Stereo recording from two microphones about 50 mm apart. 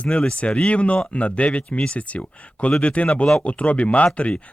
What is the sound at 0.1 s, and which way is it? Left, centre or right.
Speech, centre.